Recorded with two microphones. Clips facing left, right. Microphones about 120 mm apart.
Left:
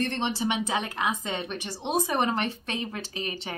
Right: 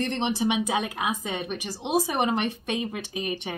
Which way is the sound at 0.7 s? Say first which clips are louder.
Right 1 dB; 15° right (ahead or behind).